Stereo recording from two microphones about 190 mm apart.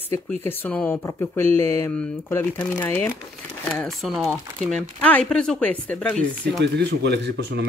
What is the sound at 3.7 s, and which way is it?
Speech, centre (ahead or behind).